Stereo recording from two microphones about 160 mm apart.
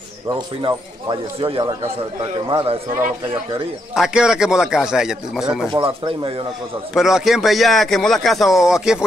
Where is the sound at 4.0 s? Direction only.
5° right (ahead or behind).